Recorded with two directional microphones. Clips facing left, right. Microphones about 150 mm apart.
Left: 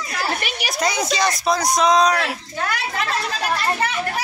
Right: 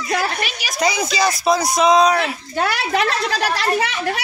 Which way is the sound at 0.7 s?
Centre (ahead or behind).